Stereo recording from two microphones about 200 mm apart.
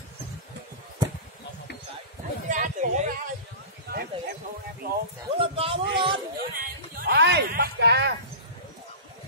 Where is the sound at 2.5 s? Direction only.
40° right (ahead or behind).